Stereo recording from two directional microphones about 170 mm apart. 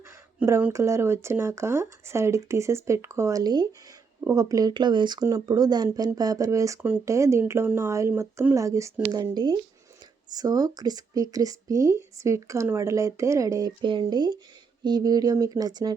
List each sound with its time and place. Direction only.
0.3 s speech: 10° right (ahead or behind)